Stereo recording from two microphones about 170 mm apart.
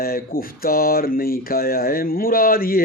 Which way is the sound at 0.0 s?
60° left (ahead or behind).